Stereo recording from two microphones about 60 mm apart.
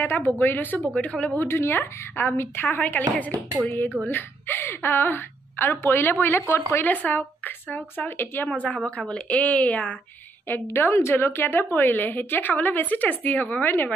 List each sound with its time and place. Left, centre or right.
0.0 s a woman's voice: left
1.4 s a woman's voice: left
10.5 s a woman's voice: left